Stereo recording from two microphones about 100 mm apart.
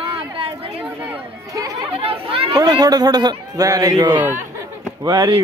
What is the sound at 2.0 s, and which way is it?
Chatter, 70° right (ahead or behind).